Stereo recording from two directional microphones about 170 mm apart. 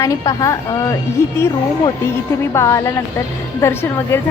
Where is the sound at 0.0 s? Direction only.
20° left (ahead or behind).